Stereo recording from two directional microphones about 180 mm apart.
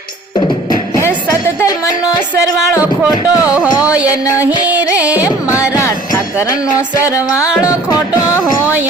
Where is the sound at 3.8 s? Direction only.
5° right (ahead or behind).